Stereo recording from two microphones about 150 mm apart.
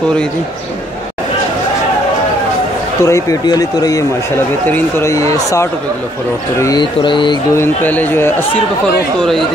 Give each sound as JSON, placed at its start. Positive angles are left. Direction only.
{"t": 3.0, "sound": "speech", "side_deg": 20}
{"t": 7.5, "sound": "speech", "side_deg": 15}